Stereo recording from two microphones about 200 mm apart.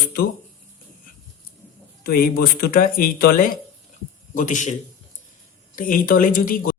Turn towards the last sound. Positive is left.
turn(degrees=45)  # may be behind; listen again after turning